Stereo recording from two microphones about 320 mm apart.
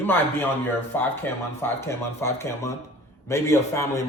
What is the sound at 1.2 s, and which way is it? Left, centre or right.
Speech, centre.